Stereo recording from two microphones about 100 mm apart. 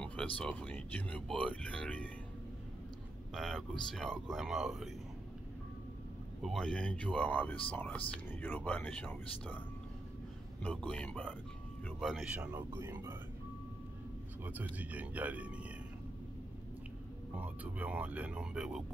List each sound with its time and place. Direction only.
0.0 s speech: 10° left (ahead or behind)
3.3 s speech: 5° left (ahead or behind)
6.4 s speech: 5° left (ahead or behind)
10.9 s speech: 10° left (ahead or behind)
12.0 s speech: centre (ahead or behind)
12.7 s speech: 25° right (ahead or behind)
14.4 s speech: 15° right (ahead or behind)
17.4 s speech: 15° right (ahead or behind)